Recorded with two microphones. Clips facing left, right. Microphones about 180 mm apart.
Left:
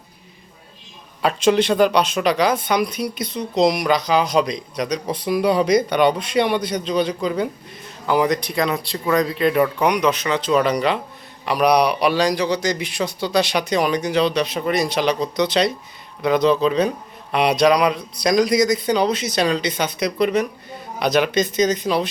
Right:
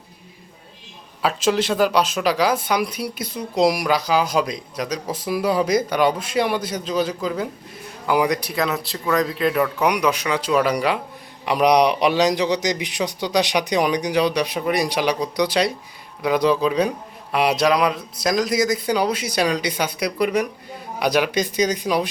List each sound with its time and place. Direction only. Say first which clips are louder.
1.2 s a man's voice: left 3 dB; 5° right (ahead or behind)
11.4 s a man's voice: even; 20° right (ahead or behind)